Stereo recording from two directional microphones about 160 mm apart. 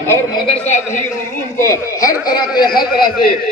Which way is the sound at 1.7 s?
20° left (ahead or behind).